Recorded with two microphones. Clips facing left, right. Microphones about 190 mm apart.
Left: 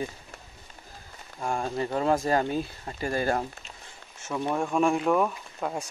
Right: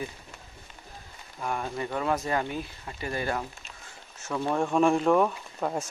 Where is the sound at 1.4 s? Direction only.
30° left (ahead or behind).